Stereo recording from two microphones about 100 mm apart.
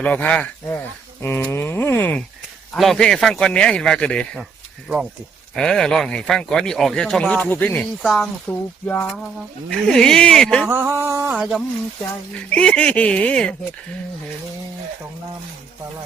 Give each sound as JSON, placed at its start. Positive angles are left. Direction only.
{"t": 0.0, "sound": "speech", "side_deg": 15}
{"t": 2.7, "sound": "speech", "side_deg": 0}
{"t": 5.5, "sound": "speech", "side_deg": 5}
{"t": 8.0, "sound": "a woman's voice", "side_deg": -5}
{"t": 8.4, "sound": "speech", "side_deg": 15}
{"t": 9.6, "sound": "speech", "side_deg": 5}
{"t": 10.7, "sound": "a sound", "side_deg": -25}
{"t": 12.5, "sound": "speech", "side_deg": 10}